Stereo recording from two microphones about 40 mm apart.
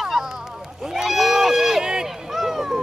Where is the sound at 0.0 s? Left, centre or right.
Centre.